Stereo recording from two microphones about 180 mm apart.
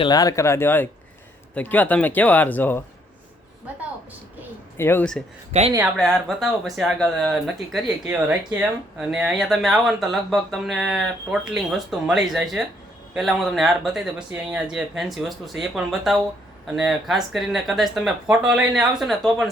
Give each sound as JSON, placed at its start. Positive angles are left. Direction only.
{"t": 0.0, "sound": "speech", "side_deg": 20}
{"t": 4.8, "sound": "speech", "side_deg": 10}
{"t": 5.5, "sound": "speech", "side_deg": -35}
{"t": 6.0, "sound": "speech", "side_deg": 0}